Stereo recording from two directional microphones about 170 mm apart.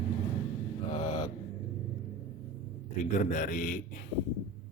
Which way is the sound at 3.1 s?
50° left (ahead or behind).